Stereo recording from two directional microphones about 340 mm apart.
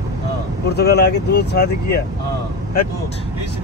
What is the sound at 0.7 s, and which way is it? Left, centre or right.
Speech, left.